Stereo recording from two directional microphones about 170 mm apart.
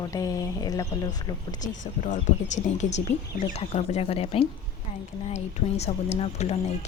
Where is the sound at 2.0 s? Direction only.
45° left (ahead or behind).